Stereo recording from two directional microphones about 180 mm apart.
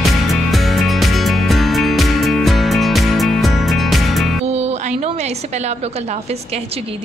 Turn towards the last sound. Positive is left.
turn(degrees=-35)  # may be behind; listen again after turning